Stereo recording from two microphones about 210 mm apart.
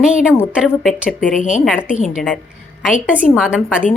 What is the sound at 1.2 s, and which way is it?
Speech, 35° left (ahead or behind).